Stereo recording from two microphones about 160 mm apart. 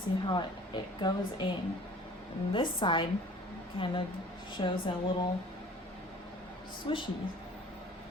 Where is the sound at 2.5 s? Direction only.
30° left (ahead or behind).